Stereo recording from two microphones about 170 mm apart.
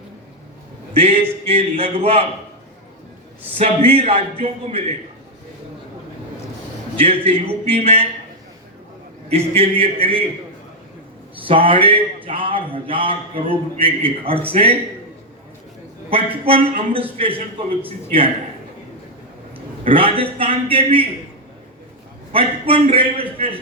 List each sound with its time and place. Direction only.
0.9 s speech: 35° right (ahead or behind)
3.6 s speech: 35° right (ahead or behind)
7.0 s speech: 35° right (ahead or behind)
9.3 s speech: 35° right (ahead or behind)
11.4 s speech: 30° right (ahead or behind)
16.5 s speech: 35° right (ahead or behind)
19.8 s a man's voice: 30° right (ahead or behind)
22.3 s speech: 30° right (ahead or behind)